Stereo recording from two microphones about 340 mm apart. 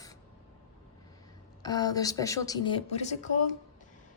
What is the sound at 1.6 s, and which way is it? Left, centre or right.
A woman's voice, centre.